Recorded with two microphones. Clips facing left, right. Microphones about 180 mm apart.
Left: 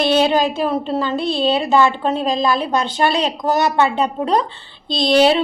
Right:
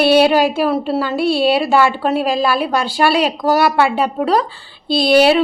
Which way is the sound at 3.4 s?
25° left (ahead or behind).